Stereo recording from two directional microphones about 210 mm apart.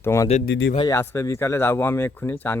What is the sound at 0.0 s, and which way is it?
Speech, 15° left (ahead or behind).